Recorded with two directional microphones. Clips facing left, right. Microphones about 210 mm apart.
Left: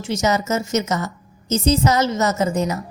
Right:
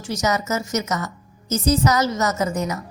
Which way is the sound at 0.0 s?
25° left (ahead or behind).